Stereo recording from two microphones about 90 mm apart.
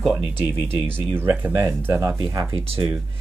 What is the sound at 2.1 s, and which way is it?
Speech, 55° right (ahead or behind).